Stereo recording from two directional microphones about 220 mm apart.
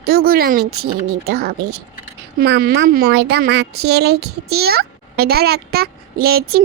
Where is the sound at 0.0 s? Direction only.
45° right (ahead or behind).